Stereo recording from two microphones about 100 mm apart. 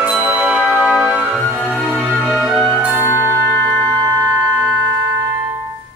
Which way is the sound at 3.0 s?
25° left (ahead or behind).